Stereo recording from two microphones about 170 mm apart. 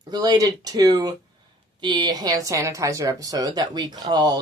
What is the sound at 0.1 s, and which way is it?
Speech, 20° right (ahead or behind).